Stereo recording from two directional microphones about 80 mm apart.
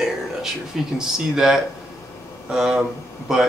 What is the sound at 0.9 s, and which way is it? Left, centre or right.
Speech, centre.